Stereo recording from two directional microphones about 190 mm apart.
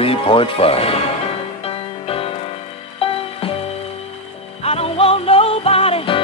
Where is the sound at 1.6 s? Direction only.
30° left (ahead or behind).